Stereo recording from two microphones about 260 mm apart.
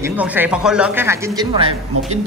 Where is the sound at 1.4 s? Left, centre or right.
Centre.